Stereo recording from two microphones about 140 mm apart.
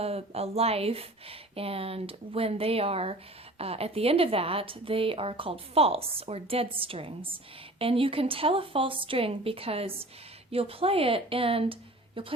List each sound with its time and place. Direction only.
0.0 s a woman's voice: 45° right (ahead or behind)